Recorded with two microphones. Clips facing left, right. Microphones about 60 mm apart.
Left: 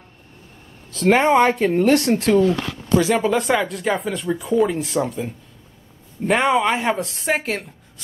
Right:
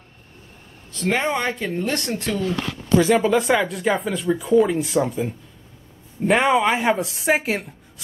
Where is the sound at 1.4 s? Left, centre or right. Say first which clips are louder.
Left 8 dB; left.